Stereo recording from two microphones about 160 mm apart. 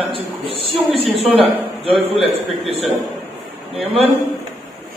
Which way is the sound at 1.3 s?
35° right (ahead or behind).